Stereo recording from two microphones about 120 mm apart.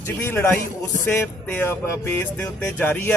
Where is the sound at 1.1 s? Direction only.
15° left (ahead or behind).